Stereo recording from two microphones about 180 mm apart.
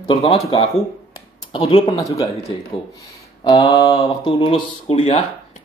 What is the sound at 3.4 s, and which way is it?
Speech, 35° left (ahead or behind).